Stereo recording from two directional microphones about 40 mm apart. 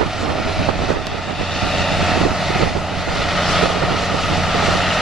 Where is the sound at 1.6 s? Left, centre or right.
Centre.